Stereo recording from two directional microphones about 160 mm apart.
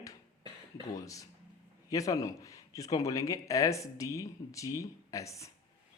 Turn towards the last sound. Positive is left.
turn(degrees=20)  # may be behind; listen again after turning